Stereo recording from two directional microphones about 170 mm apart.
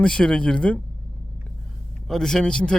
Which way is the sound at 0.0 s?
5° left (ahead or behind).